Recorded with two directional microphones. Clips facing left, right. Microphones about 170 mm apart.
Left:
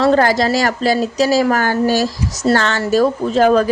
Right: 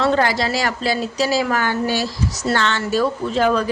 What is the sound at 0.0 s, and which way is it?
A woman's voice, 40° left (ahead or behind).